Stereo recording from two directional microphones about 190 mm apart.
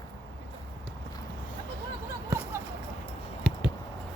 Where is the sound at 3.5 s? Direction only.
5° left (ahead or behind).